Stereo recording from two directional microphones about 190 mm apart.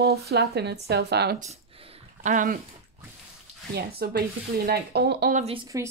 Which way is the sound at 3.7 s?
55° right (ahead or behind).